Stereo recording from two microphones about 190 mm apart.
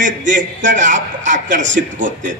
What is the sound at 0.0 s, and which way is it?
A man's voice, 40° right (ahead or behind).